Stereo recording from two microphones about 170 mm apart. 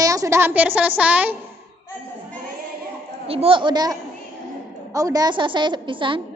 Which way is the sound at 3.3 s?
35° right (ahead or behind).